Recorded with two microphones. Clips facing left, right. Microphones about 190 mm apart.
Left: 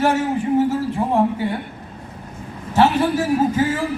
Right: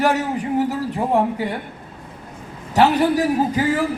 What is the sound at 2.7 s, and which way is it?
A man's voice, 15° right (ahead or behind).